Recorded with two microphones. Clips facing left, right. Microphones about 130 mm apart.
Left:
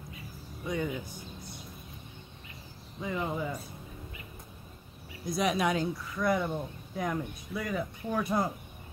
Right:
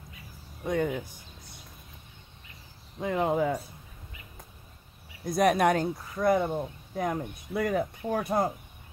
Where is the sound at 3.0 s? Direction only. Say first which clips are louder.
Right 7 dB; 60° right (ahead or behind).